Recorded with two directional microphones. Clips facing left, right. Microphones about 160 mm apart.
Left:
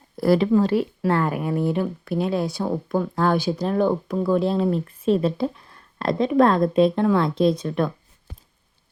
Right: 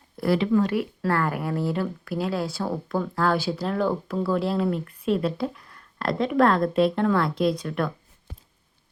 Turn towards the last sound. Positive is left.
turn(degrees=20)  # may be behind; listen again after turning